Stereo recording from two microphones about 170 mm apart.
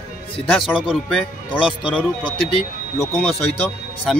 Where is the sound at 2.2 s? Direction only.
30° left (ahead or behind).